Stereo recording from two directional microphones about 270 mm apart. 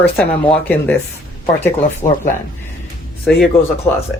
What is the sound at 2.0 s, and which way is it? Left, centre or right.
Speech, centre.